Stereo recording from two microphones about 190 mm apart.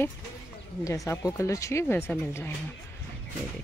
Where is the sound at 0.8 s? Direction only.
15° left (ahead or behind).